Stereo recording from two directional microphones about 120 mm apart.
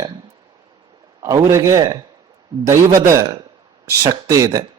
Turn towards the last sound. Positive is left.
turn(degrees=-30)  # may be behind; listen again after turning